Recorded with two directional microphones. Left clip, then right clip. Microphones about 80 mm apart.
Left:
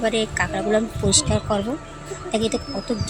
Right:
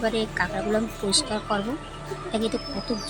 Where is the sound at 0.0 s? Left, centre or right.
Left.